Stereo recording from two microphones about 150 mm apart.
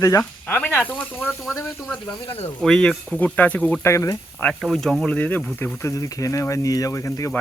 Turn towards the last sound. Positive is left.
turn(degrees=20)  # may be behind; listen again after turning